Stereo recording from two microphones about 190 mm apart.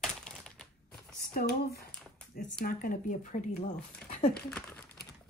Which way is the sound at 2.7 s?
50° left (ahead or behind).